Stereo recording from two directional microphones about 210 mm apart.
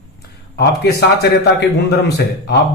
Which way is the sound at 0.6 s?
50° left (ahead or behind).